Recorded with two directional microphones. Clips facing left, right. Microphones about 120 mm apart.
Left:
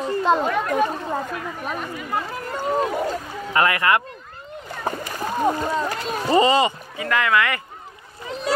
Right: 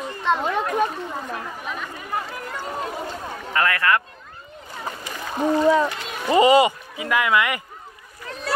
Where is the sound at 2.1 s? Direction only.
30° left (ahead or behind).